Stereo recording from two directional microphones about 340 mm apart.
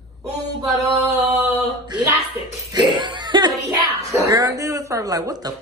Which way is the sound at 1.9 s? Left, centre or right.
Centre.